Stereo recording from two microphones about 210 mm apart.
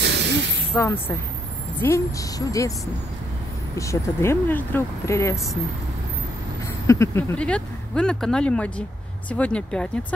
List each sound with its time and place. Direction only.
0.0 s a sound: 55° right (ahead or behind)
0.7 s speech: 10° left (ahead or behind)
3.7 s speech: 15° left (ahead or behind)
6.9 s speech: 15° left (ahead or behind)